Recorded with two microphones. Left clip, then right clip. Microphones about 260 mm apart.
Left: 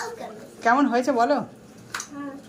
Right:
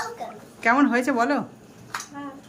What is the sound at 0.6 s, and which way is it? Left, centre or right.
Speech, centre.